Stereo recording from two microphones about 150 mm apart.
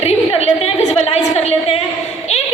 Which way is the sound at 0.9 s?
45° left (ahead or behind).